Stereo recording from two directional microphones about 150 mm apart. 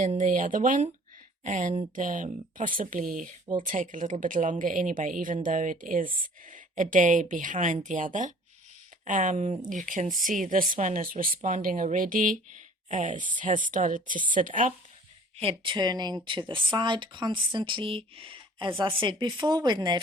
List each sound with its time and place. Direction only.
0.0 s speech: 55° right (ahead or behind)
15.4 s speech: 35° right (ahead or behind)